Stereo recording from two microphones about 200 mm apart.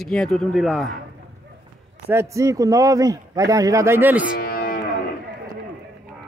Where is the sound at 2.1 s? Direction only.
15° right (ahead or behind).